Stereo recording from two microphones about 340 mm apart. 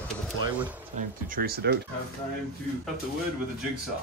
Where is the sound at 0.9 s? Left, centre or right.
Right.